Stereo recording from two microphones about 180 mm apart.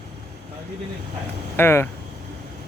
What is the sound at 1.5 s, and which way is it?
Speech, 15° left (ahead or behind).